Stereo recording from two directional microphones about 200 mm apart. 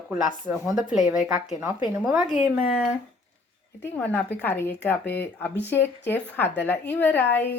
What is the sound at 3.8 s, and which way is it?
A woman's voice, 10° left (ahead or behind).